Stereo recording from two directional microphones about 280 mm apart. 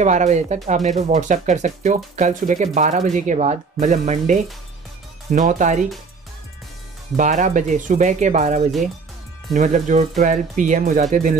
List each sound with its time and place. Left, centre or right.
0.0 s speech: right
7.2 s speech: right